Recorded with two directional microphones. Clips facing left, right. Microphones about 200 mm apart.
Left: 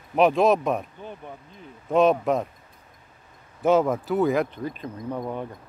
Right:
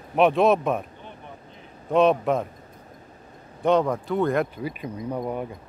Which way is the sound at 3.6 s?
5° left (ahead or behind).